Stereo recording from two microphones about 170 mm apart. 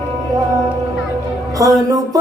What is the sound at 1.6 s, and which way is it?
Music, 20° right (ahead or behind).